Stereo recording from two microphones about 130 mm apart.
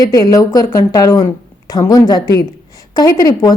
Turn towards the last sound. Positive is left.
turn(degrees=30)  # may be behind; listen again after turning